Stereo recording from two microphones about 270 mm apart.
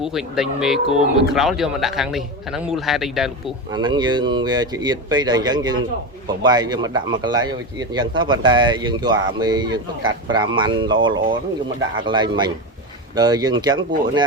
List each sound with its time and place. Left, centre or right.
0.0 s speech: centre
3.7 s speech: centre